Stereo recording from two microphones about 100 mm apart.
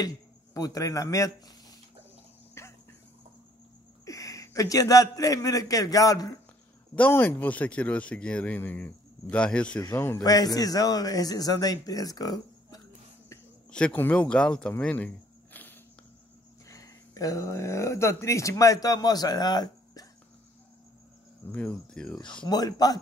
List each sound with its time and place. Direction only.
0.6 s speech: 35° left (ahead or behind)
2.6 s a sound: 25° left (ahead or behind)
4.0 s a man's voice: 35° left (ahead or behind)
7.0 s a man's voice: 20° left (ahead or behind)
9.9 s a man's voice: 25° left (ahead or behind)
10.2 s a man's voice: 40° left (ahead or behind)
13.7 s a man's voice: 10° left (ahead or behind)
14.8 s cricket: 15° left (ahead or behind)
16.6 s speech: 35° left (ahead or behind)
21.5 s a man's voice: 10° left (ahead or behind)
22.4 s a man's voice: 40° left (ahead or behind)